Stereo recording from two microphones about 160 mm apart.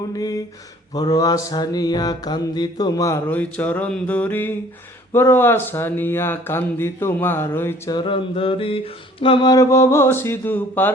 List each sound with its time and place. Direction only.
0.1 s mantra: 25° left (ahead or behind)
5.1 s speech: 15° left (ahead or behind)
7.9 s mantra: 35° left (ahead or behind); by 10.9 s 10° left (ahead or behind)